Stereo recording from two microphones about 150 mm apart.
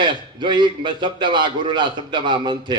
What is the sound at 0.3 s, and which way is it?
A man's voice, 30° right (ahead or behind).